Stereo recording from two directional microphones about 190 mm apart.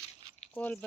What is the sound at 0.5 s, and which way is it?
Speech, 10° left (ahead or behind).